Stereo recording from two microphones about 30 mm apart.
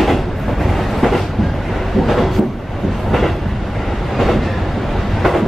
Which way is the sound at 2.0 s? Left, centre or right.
Centre.